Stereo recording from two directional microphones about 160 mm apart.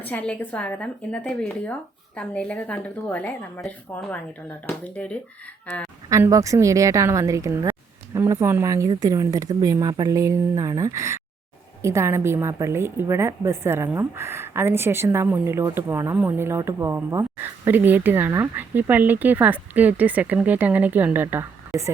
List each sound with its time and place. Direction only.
0.0 s speech: 10° left (ahead or behind)
6.1 s a woman's voice: 20° right (ahead or behind); by 21.9 s centre (ahead or behind)